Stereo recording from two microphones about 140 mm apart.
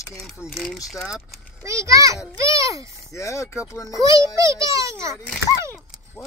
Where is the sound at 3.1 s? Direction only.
20° left (ahead or behind).